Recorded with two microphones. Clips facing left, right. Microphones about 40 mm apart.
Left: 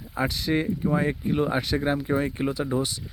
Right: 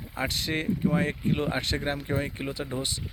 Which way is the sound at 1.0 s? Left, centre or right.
Right.